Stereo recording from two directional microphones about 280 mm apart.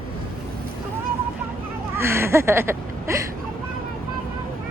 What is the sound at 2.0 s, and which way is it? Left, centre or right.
Speech, centre.